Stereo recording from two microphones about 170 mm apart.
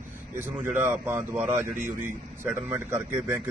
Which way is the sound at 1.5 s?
50° right (ahead or behind).